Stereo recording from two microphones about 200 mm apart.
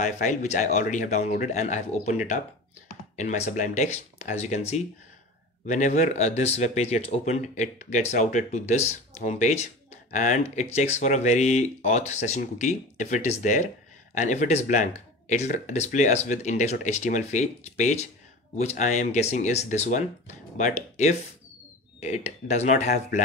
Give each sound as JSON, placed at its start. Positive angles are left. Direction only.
{"t": 0.0, "sound": "speech", "side_deg": 35}
{"t": 3.2, "sound": "speech", "side_deg": 40}